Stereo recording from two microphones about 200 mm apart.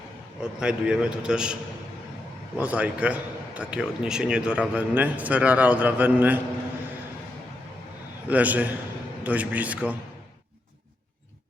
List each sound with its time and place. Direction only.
0.6 s a man's voice: 5° right (ahead or behind)
2.6 s a man's voice: 5° right (ahead or behind)
8.3 s a man's voice: 10° right (ahead or behind)